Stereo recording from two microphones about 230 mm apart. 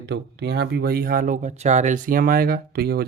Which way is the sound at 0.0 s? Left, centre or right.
Right.